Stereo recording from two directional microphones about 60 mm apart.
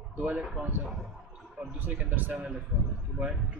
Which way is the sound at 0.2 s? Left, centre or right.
Right.